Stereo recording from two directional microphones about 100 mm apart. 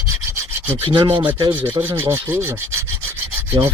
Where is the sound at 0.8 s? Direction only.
45° right (ahead or behind).